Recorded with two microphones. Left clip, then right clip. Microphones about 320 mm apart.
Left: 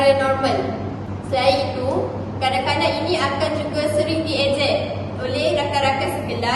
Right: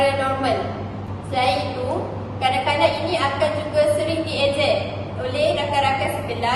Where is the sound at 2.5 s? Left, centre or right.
Centre.